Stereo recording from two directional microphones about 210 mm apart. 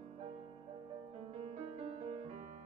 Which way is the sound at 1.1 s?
30° right (ahead or behind).